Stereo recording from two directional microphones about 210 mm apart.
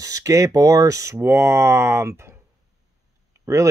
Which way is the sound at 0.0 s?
15° right (ahead or behind).